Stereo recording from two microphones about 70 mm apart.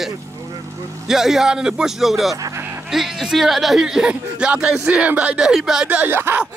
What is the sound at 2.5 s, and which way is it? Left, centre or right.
Music, right.